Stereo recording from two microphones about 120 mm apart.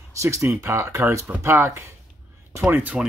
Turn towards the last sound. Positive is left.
turn(degrees=-15)  # may be behind; listen again after turning